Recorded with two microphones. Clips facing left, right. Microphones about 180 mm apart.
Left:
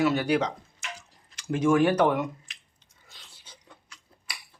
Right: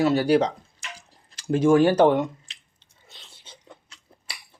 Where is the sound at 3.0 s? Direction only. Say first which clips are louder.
Right 4 dB; 25° right (ahead or behind).